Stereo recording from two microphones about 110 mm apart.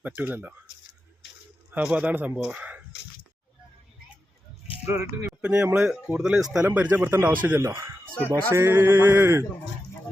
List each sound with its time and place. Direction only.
0.0 s speech: 15° right (ahead or behind)
1.7 s speech: 10° right (ahead or behind)
5.4 s speech: 15° right (ahead or behind)